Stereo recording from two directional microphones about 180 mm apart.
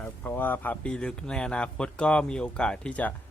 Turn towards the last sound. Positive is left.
turn(degrees=5)  # may be behind; listen again after turning